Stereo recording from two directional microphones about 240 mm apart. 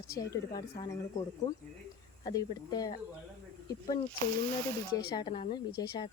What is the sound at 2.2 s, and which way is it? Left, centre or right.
Speech, centre.